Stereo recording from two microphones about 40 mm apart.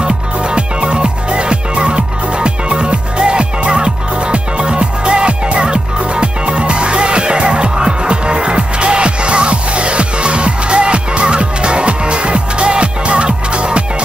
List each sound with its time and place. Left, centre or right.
0.0 s music: right